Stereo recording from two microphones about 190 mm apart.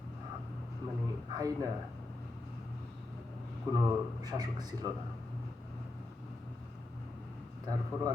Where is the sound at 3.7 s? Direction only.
20° right (ahead or behind).